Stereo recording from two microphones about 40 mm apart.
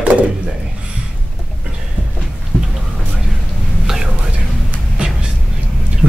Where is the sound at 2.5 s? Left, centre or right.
Left.